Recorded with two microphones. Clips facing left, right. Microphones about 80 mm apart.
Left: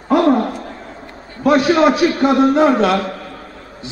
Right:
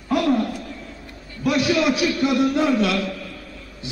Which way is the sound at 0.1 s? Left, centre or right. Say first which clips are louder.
Left 6 dB; left.